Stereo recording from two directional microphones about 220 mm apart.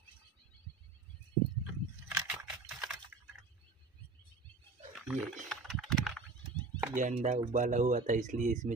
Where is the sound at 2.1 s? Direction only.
5° right (ahead or behind).